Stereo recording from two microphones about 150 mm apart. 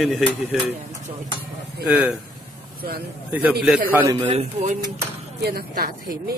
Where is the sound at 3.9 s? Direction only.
20° right (ahead or behind).